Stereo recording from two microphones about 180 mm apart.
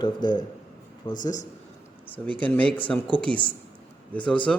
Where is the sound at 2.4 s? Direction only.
10° left (ahead or behind).